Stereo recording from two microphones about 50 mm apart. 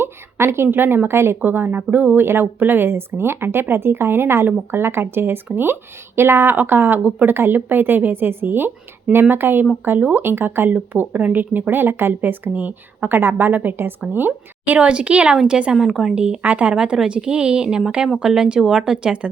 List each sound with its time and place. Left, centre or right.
0.0 s a woman's voice: right
1.4 s speech: right
2.2 s speech: right
10.9 s speech: right
12.5 s speech: right
13.1 s speech: right
14.8 s speech: right
15.8 s speech: centre
16.1 s speech: right
16.7 s speech: centre